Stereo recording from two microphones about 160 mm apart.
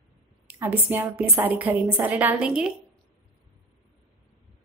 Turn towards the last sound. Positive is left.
turn(degrees=-5)  # may be behind; listen again after turning